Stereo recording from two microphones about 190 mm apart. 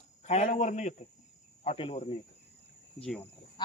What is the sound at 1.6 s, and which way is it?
Speech, 30° left (ahead or behind).